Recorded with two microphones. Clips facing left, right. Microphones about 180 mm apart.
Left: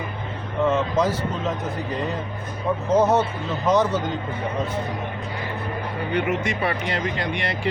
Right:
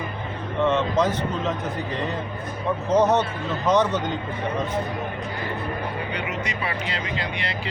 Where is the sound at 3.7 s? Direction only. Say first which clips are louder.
Left 1 dB; 5° left (ahead or behind).